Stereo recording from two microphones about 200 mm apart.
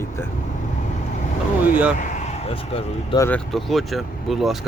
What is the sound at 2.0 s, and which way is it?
Speech, 35° left (ahead or behind).